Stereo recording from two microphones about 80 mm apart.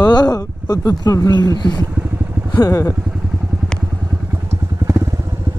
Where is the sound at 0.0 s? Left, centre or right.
Left.